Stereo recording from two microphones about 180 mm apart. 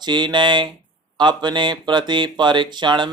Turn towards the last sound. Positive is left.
turn(degrees=-25)  # may be behind; listen again after turning